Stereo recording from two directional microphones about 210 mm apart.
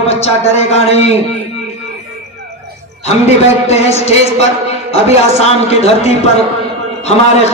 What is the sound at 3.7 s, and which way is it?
A man's voice, 30° left (ahead or behind).